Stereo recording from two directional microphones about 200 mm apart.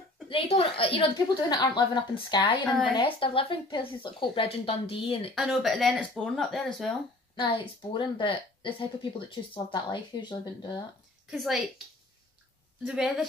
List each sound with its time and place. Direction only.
0.3 s a woman's voice: 30° left (ahead or behind)
5.3 s speech: centre (ahead or behind)
7.3 s a woman's voice: 25° left (ahead or behind)
11.2 s speech: centre (ahead or behind)
12.8 s speech: 5° right (ahead or behind)